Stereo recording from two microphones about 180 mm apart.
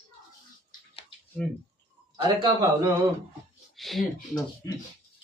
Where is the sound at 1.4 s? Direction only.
5° left (ahead or behind).